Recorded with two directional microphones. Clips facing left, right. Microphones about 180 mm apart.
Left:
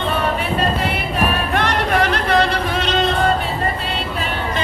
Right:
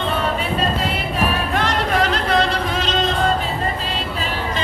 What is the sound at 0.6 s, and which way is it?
Music, 60° left (ahead or behind).